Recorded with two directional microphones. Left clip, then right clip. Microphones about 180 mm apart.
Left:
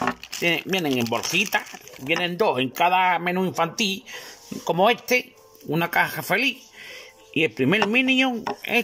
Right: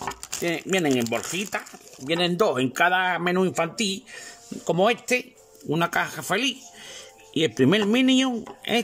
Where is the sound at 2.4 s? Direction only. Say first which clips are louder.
Left 4 dB; 20° right (ahead or behind).